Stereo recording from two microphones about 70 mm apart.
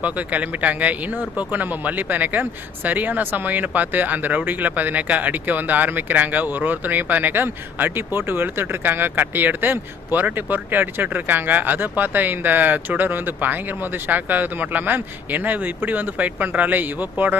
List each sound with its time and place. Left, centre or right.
0.0 s speech: right